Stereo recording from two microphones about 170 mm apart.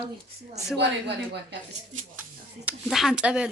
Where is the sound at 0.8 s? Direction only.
85° right.